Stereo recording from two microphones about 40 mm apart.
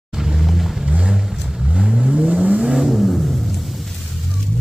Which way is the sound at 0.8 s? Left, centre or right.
Right.